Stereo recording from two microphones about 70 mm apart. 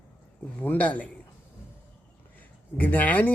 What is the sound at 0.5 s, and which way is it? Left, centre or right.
Speech, left.